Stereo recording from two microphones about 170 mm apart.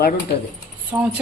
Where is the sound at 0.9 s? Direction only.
15° right (ahead or behind).